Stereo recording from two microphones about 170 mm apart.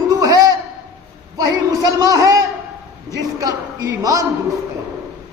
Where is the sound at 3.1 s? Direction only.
20° right (ahead or behind).